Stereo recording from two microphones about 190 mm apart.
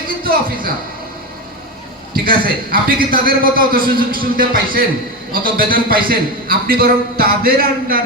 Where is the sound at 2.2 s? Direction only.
50° right (ahead or behind).